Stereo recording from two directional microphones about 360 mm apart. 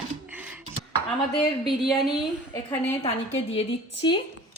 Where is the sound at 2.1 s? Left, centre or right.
Centre.